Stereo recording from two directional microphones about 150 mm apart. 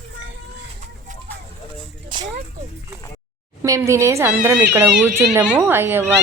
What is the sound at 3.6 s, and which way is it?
Speech, 20° right (ahead or behind).